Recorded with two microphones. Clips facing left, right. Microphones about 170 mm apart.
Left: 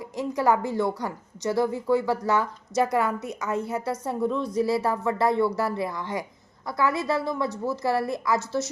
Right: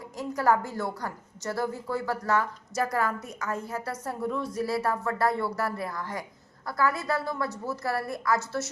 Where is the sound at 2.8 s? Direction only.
20° left (ahead or behind).